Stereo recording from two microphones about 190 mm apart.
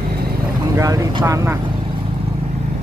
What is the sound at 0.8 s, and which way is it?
Vehicle, 15° right (ahead or behind).